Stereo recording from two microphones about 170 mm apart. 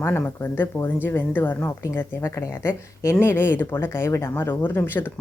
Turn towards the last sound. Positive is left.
turn(degrees=10)  # may be behind; listen again after turning